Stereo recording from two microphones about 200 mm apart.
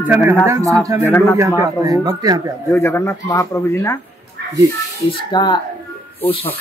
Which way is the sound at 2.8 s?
15° left (ahead or behind).